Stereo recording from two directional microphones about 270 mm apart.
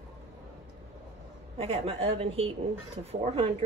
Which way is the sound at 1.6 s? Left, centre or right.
Right.